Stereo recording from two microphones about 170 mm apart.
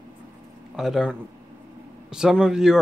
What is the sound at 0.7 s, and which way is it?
Speech, centre (ahead or behind).